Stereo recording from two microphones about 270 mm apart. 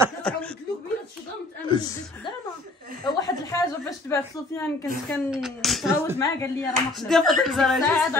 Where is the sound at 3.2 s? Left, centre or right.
Centre.